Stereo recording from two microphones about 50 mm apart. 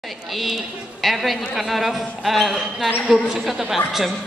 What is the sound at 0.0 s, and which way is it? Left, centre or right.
A woman's voice, centre.